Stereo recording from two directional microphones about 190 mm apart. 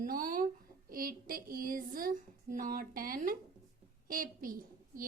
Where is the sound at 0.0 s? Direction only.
45° right (ahead or behind).